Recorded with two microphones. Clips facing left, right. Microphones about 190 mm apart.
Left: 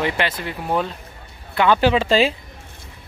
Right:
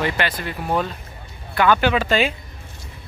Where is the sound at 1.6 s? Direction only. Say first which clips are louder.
Left 1 dB; 30° left (ahead or behind).